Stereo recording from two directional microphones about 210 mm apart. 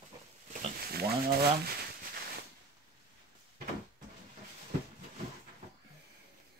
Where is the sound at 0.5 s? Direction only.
40° right (ahead or behind).